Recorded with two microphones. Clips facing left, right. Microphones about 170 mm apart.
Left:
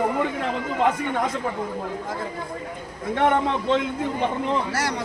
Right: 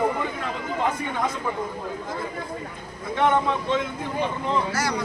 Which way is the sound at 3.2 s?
60° left (ahead or behind).